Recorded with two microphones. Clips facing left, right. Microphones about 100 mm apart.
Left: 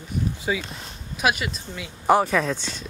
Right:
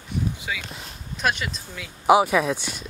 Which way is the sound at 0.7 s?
Centre (ahead or behind).